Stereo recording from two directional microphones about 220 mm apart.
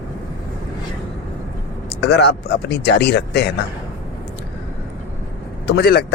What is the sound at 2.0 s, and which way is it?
Speech, 50° left (ahead or behind).